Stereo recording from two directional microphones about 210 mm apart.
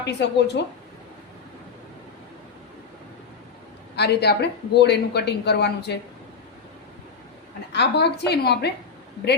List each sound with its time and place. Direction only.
0.0 s a woman's voice: 55° left (ahead or behind)
3.9 s speech: 50° left (ahead or behind)
7.7 s speech: 55° left (ahead or behind)